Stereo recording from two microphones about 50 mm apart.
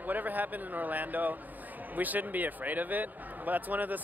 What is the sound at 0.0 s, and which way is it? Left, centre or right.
A man's voice, right.